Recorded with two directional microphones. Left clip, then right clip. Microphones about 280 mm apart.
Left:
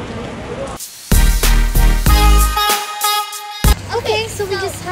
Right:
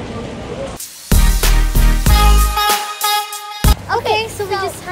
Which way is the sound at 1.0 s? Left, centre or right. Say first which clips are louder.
Even; centre.